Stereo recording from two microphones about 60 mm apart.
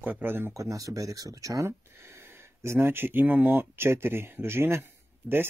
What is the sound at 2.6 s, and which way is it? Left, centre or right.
Speech, right.